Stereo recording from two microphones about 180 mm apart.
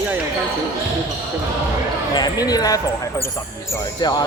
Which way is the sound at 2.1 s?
20° left (ahead or behind).